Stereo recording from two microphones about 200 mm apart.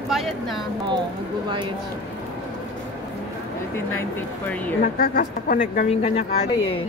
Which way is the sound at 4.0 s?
10° left (ahead or behind).